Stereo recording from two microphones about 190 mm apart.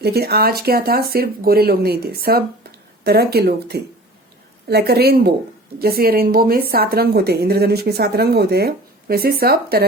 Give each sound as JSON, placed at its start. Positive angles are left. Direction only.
{"t": 0.0, "sound": "a woman's voice", "side_deg": -55}